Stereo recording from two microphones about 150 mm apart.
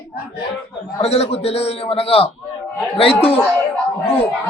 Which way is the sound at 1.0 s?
45° left (ahead or behind).